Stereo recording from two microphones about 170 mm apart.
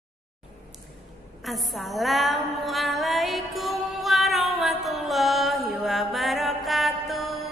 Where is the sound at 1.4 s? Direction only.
Centre (ahead or behind).